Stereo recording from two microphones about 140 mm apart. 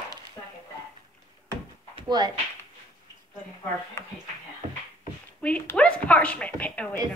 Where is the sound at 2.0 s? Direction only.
30° right (ahead or behind).